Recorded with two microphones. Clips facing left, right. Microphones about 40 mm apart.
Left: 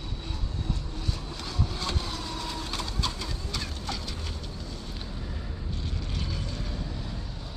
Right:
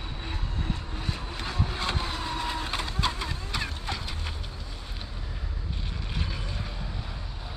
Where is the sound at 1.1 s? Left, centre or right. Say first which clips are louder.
Right 3 dB; right.